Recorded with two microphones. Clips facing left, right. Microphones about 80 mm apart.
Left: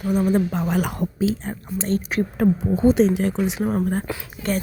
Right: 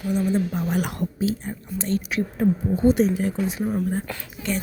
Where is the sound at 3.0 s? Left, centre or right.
Left.